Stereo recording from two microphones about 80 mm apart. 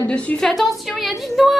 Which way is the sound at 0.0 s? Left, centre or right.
Centre.